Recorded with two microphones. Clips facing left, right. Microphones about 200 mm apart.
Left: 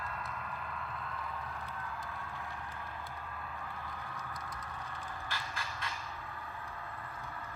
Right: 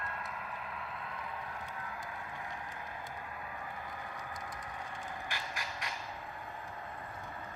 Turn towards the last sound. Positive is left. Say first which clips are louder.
# even
turn(degrees=-15)  # may be behind; listen again after turning